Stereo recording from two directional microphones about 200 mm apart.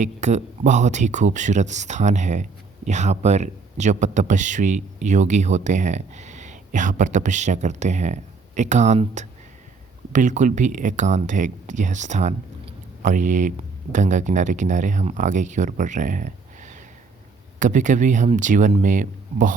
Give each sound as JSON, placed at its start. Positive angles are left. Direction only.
{"t": 0.0, "sound": "speech", "side_deg": -35}